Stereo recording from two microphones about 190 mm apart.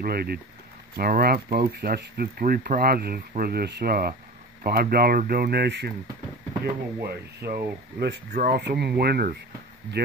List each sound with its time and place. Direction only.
0.0 s speech: 55° right (ahead or behind)